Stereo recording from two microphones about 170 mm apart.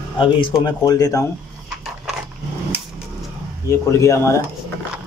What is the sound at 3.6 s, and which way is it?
Speech, 15° left (ahead or behind).